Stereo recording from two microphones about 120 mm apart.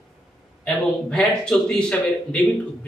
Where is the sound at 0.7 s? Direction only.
5° left (ahead or behind).